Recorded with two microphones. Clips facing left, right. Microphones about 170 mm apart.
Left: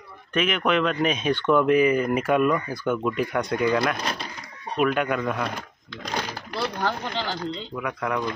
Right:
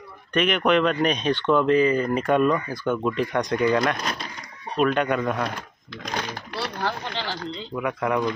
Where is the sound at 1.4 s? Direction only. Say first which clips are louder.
Left 1 dB; 20° right (ahead or behind).